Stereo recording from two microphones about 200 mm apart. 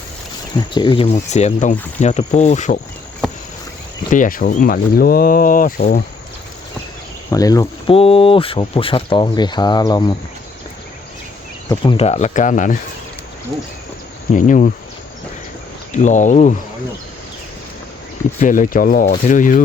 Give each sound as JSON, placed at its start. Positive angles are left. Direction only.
{"t": 0.5, "sound": "speech", "side_deg": 25}
{"t": 4.1, "sound": "speech", "side_deg": 45}
{"t": 7.3, "sound": "speech", "side_deg": 15}
{"t": 7.9, "sound": "speech", "side_deg": 30}
{"t": 11.7, "sound": "speech", "side_deg": 25}
{"t": 14.3, "sound": "speech", "side_deg": 40}
{"t": 15.9, "sound": "speech", "side_deg": 40}
{"t": 18.3, "sound": "speech", "side_deg": 40}